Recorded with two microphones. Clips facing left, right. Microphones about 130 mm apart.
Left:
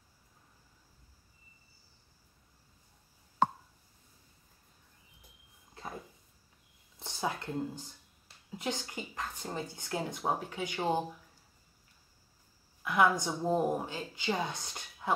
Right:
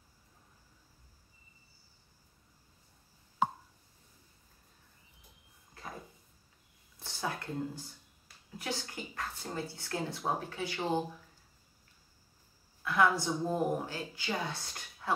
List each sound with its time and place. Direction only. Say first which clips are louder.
7.0 s a sound: left 2 dB; 20° left (ahead or behind)
8.5 s speech: left 2 dB; 20° left (ahead or behind)
12.8 s speech: left 1 dB; 15° left (ahead or behind)